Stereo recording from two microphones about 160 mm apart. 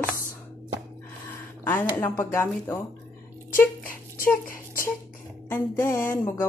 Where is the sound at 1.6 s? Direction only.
10° left (ahead or behind).